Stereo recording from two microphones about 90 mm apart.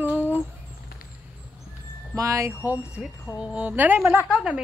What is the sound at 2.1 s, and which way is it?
Speech, 35° right (ahead or behind).